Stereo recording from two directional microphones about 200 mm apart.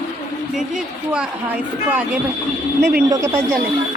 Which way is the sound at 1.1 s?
5° right (ahead or behind).